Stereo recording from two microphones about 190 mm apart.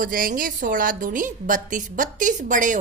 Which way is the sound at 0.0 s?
45° right (ahead or behind).